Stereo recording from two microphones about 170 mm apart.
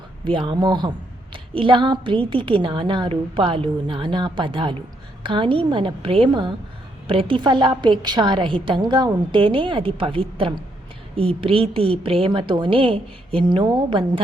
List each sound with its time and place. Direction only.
0.3 s a woman's voice: 30° right (ahead or behind)